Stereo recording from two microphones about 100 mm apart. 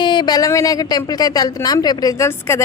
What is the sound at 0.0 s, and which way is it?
Speech, 50° left (ahead or behind).